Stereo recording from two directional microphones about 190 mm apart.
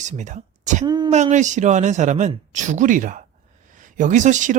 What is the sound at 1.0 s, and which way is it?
Speech, 35° right (ahead or behind).